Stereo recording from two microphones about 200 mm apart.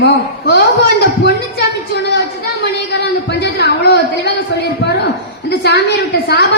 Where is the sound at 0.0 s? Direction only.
55° left (ahead or behind).